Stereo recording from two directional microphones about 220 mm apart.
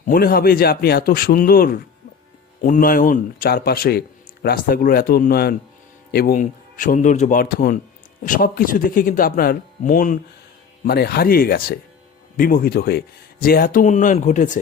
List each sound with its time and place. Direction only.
0.1 s a man's voice: 45° left (ahead or behind)